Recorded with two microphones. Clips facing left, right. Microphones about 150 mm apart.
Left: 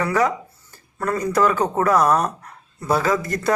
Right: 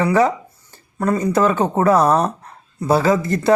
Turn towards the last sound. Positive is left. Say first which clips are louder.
# right 4 dB
turn(degrees=-25)  # may be behind; listen again after turning